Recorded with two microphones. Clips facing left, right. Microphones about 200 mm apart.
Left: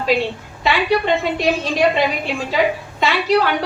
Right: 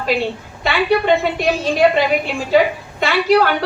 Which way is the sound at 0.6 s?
50° right (ahead or behind).